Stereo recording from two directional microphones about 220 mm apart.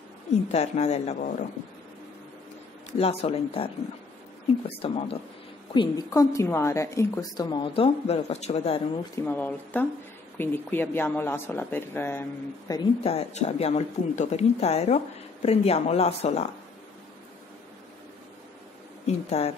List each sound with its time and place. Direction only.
0.5 s speech: 30° left (ahead or behind)
2.9 s a woman's voice: 25° left (ahead or behind)
9.1 s a woman's voice: 10° left (ahead or behind)
13.0 s speech: 30° left (ahead or behind)
19.0 s speech: 30° left (ahead or behind)